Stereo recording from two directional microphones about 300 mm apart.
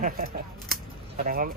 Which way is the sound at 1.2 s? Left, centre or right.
Right.